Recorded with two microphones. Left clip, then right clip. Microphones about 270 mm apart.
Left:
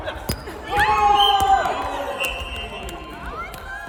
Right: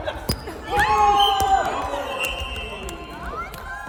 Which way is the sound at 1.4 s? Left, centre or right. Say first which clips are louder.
Left 2 dB; centre.